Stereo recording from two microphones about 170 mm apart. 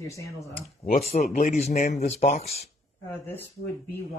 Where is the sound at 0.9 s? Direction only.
40° left (ahead or behind).